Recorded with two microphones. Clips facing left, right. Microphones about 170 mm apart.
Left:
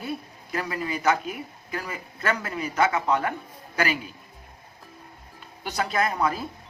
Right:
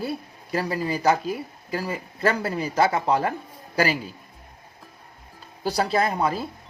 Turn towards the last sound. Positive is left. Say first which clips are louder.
# right 2 dB
turn(degrees=-30)  # may be behind; listen again after turning